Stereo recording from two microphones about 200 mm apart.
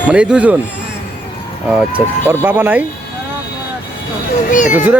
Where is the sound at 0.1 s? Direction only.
5° right (ahead or behind).